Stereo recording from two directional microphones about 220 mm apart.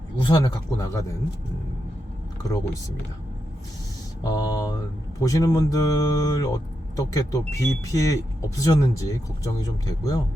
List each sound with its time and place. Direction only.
0.2 s speech: 20° left (ahead or behind)
4.2 s speech: 15° left (ahead or behind)